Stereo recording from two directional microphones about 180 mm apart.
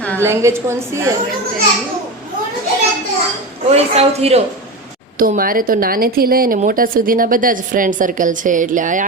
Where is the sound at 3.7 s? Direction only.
35° right (ahead or behind).